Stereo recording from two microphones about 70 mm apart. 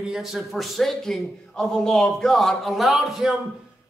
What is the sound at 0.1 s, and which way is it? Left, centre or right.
A man's voice, centre.